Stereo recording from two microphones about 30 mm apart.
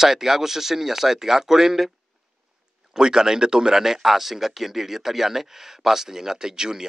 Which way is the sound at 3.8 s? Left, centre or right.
Centre.